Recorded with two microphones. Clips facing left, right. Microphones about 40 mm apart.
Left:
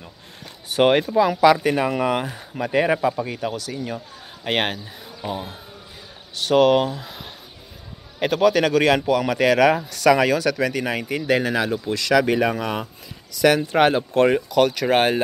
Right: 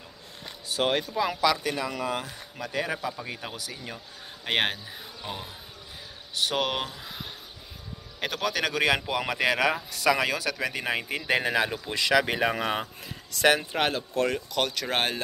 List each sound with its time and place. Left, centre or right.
0.7 s speech: left
1.0 s a man's voice: centre
1.4 s speech: left
1.7 s speech: left
2.5 s a man's voice: left
3.3 s a man's voice: centre
6.3 s a man's voice: centre
9.0 s speech: centre
12.5 s speech: right
13.4 s speech: right
13.7 s speech: centre
14.2 s speech: left
14.5 s speech: centre